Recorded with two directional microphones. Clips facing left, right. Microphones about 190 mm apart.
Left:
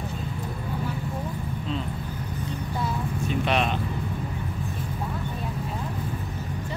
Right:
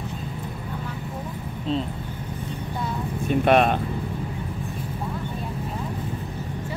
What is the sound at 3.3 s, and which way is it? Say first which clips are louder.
Speech: right 8 dB; 50° right (ahead or behind).